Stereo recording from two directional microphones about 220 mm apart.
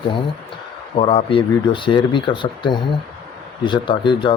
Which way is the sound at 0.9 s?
25° left (ahead or behind).